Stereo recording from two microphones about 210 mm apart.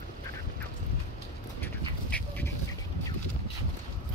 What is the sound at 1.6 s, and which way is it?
Duck, 10° left (ahead or behind).